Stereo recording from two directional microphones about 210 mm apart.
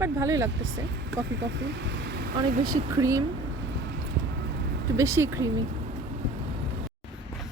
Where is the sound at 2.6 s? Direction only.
15° right (ahead or behind).